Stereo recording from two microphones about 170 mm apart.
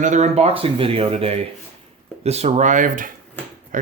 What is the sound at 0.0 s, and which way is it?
Speech, 45° right (ahead or behind).